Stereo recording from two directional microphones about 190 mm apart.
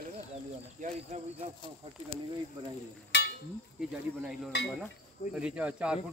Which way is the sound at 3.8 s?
Centre (ahead or behind).